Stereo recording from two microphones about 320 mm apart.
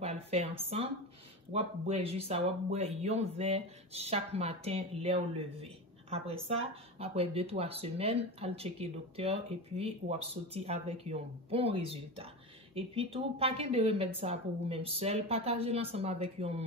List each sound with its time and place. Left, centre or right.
0.0 s speech: centre